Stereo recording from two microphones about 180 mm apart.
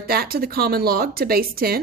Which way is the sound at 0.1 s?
55° right (ahead or behind).